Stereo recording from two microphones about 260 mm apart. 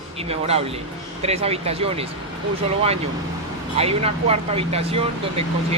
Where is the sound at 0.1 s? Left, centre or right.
Right.